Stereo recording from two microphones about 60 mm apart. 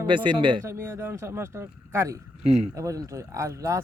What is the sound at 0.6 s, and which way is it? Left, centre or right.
Speech, right.